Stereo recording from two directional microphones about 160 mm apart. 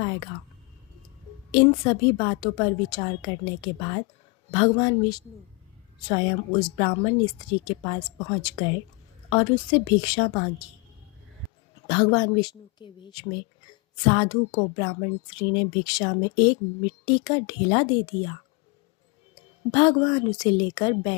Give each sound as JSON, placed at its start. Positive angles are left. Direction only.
{"t": 1.5, "sound": "a woman's voice", "side_deg": 30}
{"t": 11.9, "sound": "speech", "side_deg": 30}
{"t": 19.7, "sound": "speech", "side_deg": 30}